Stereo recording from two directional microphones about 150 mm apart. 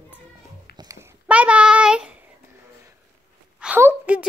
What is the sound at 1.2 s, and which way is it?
Child singing, 10° right (ahead or behind).